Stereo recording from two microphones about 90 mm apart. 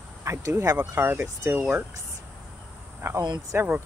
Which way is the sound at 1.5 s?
15° right (ahead or behind).